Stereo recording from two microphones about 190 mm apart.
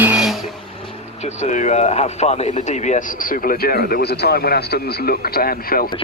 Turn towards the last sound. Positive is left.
turn(degrees=50)  # may be behind; listen again after turning